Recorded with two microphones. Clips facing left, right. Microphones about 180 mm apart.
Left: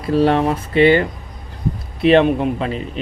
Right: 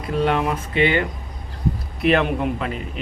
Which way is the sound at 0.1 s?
35° left (ahead or behind).